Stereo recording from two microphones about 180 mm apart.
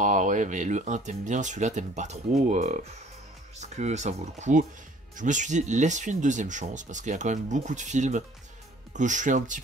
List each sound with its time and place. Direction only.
0.0 s speech: 45° right (ahead or behind)